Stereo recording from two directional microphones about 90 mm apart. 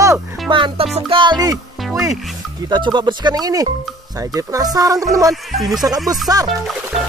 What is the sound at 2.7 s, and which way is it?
Speech, 55° right (ahead or behind).